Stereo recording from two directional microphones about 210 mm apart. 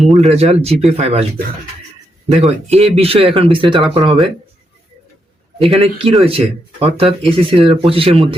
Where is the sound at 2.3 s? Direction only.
30° right (ahead or behind).